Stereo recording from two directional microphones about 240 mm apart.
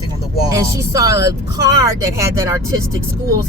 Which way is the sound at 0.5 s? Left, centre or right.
Centre.